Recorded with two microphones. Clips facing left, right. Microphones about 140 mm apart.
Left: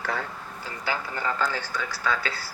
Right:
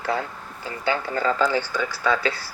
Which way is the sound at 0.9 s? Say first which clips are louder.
Right 6 dB; 80° right.